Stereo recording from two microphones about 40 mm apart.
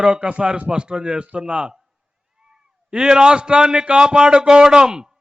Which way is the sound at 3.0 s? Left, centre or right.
Centre.